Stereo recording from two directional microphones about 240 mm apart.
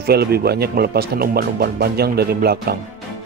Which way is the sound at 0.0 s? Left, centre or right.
Right.